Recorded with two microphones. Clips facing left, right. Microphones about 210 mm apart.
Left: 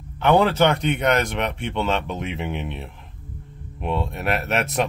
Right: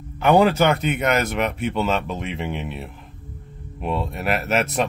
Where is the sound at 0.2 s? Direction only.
10° right (ahead or behind).